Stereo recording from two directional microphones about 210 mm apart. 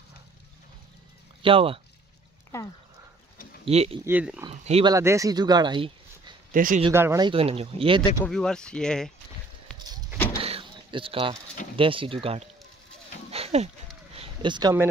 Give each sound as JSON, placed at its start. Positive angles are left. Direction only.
{"t": 1.4, "sound": "speech", "side_deg": -25}
{"t": 3.6, "sound": "speech", "side_deg": -30}
{"t": 4.0, "sound": "speech", "side_deg": -5}
{"t": 4.5, "sound": "speech", "side_deg": -25}
{"t": 4.9, "sound": "speech", "side_deg": -15}
{"t": 6.5, "sound": "speech", "side_deg": -40}
{"t": 6.9, "sound": "speech", "side_deg": -10}
{"t": 8.3, "sound": "speech", "side_deg": 5}
{"t": 10.4, "sound": "a sound", "side_deg": -25}
{"t": 11.7, "sound": "speech", "side_deg": -25}
{"t": 13.3, "sound": "a sound", "side_deg": -30}